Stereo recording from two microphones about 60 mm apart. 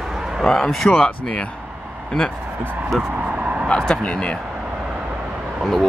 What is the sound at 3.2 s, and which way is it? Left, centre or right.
Vehicle, right.